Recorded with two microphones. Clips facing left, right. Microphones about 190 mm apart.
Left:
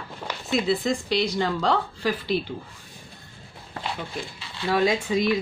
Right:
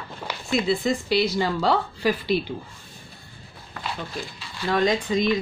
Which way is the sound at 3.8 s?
30° left (ahead or behind).